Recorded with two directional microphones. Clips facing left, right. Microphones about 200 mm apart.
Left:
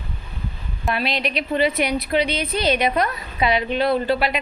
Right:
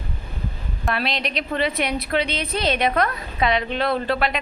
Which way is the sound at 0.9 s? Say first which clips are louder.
Left 2 dB; centre (ahead or behind).